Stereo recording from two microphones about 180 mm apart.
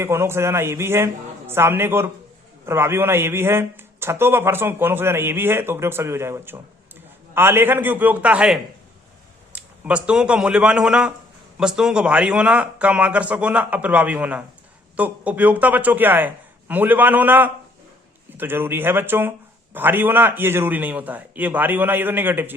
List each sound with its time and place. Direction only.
0.0 s a man's voice: 15° right (ahead or behind)